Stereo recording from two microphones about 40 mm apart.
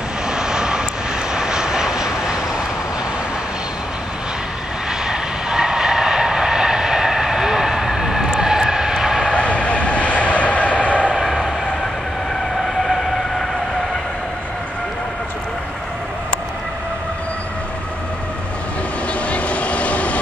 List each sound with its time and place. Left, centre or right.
0.3 s vehicle: centre
5.0 s train: centre
9.3 s vehicle: left
12.6 s vehicle: centre
19.2 s vehicle: left